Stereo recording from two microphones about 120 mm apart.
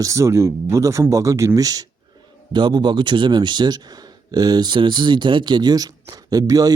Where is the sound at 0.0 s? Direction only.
25° right (ahead or behind).